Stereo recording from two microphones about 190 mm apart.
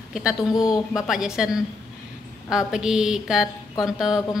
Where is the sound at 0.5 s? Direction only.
20° left (ahead or behind).